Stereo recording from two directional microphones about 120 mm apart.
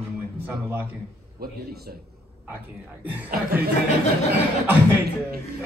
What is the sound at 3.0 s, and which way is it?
Speech, 15° right (ahead or behind).